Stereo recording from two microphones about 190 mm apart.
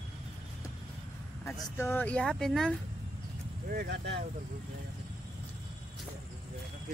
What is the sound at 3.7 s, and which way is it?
Speech, 60° right (ahead or behind).